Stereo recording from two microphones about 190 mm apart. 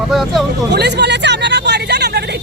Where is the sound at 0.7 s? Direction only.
60° right (ahead or behind).